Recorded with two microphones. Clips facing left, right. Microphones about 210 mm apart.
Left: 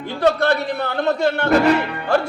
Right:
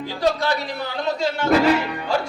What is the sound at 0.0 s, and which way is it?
A man's voice, 60° left (ahead or behind).